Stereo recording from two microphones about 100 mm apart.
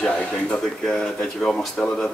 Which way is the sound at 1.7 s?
15° left (ahead or behind).